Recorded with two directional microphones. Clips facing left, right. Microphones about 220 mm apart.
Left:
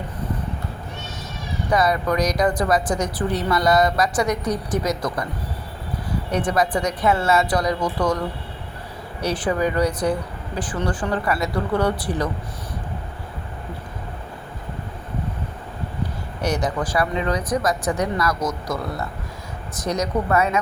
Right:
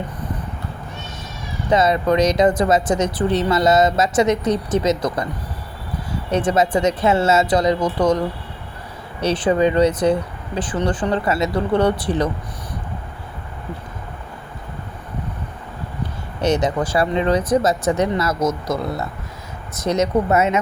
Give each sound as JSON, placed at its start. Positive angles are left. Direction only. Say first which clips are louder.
{"t": 1.7, "sound": "speech", "louder": "right 4 dB", "side_deg": -25}
{"t": 6.3, "sound": "speech", "louder": "right 4 dB", "side_deg": -25}
{"t": 9.2, "sound": "speech", "louder": "right 5 dB", "side_deg": -20}
{"t": 16.4, "sound": "speech", "louder": "right 5 dB", "side_deg": -25}